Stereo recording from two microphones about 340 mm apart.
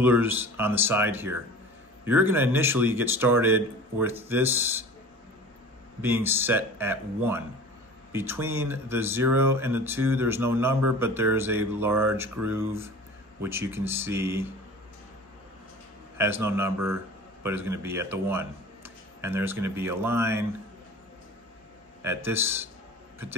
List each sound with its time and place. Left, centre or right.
0.0 s speech: centre
5.9 s speech: centre
16.2 s a man's voice: centre
22.0 s speech: centre